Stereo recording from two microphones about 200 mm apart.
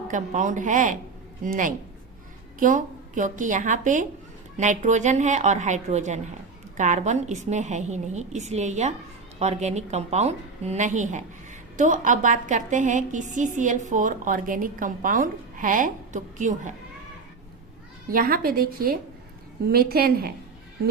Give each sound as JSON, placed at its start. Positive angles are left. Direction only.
{"t": 0.1, "sound": "a woman's voice", "side_deg": -40}
{"t": 18.1, "sound": "a woman's voice", "side_deg": -45}